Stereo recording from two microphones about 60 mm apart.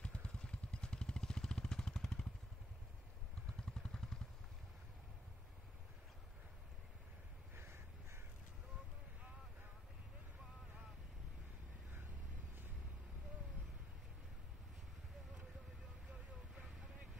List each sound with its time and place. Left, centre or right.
0.0 s vehicle: centre
3.6 s vehicle: centre
7.5 s crow: right